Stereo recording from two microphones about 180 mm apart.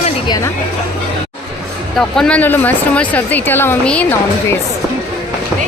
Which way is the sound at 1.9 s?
5° left (ahead or behind).